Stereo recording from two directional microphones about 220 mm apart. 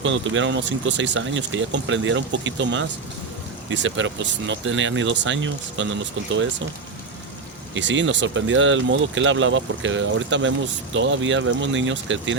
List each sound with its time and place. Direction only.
0.0 s speech: 60° right (ahead or behind)
7.7 s speech: 55° right (ahead or behind)